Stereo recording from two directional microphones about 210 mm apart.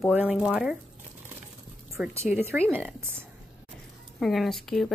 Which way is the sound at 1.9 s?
Centre (ahead or behind).